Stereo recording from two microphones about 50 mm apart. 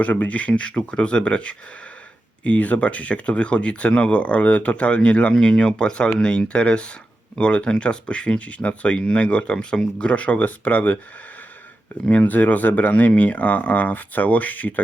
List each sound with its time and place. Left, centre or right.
0.0 s speech: left
12.0 s speech: left